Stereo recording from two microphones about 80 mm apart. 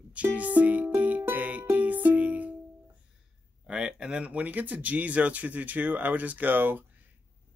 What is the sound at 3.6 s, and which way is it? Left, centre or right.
Speech, centre.